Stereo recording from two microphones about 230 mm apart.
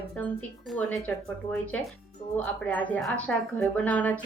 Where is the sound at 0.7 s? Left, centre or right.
Centre.